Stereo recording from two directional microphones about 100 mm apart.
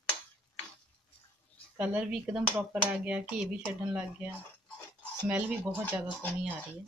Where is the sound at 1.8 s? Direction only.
10° right (ahead or behind).